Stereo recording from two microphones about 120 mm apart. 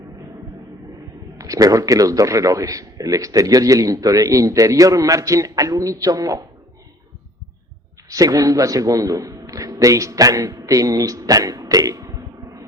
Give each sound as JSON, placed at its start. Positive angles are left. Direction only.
{"t": 1.4, "sound": "a man's voice", "side_deg": -30}
{"t": 8.1, "sound": "a man's voice", "side_deg": -30}